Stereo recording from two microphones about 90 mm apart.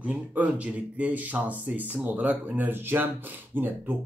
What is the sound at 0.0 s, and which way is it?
Speech, 15° right (ahead or behind).